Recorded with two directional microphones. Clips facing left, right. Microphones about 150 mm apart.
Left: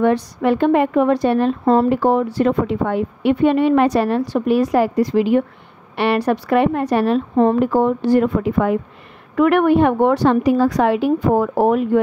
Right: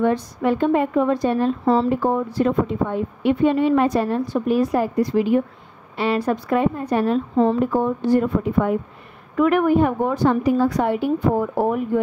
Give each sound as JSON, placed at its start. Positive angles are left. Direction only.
{"t": 0.0, "sound": "a woman's voice", "side_deg": 75}
{"t": 5.9, "sound": "a woman's voice", "side_deg": 70}
{"t": 7.3, "sound": "a woman's voice", "side_deg": 70}
{"t": 9.4, "sound": "a woman's voice", "side_deg": 70}